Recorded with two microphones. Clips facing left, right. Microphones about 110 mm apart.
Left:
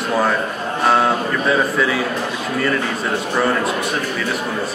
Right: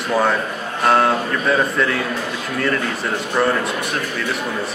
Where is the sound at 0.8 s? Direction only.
Centre (ahead or behind).